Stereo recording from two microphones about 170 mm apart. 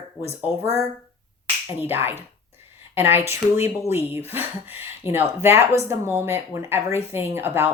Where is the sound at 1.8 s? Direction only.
10° right (ahead or behind).